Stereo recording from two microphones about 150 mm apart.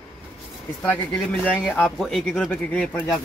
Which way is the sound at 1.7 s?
Centre (ahead or behind).